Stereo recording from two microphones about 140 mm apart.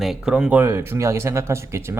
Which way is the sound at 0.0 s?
5° right (ahead or behind).